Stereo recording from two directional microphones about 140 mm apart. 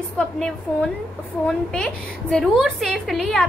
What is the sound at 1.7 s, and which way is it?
A woman's voice, 5° left (ahead or behind).